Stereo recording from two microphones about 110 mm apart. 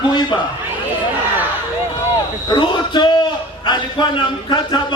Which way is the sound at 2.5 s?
45° left (ahead or behind).